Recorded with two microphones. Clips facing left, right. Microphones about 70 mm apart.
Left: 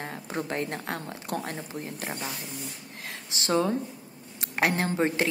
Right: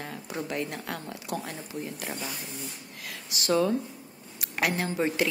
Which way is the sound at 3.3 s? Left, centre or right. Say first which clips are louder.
Right 1 dB; left.